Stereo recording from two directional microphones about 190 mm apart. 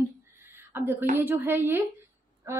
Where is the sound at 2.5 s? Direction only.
15° right (ahead or behind).